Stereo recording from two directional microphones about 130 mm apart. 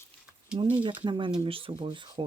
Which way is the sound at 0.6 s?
40° right (ahead or behind).